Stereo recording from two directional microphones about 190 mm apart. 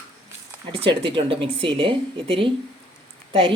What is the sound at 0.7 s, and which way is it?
Speech, 30° right (ahead or behind).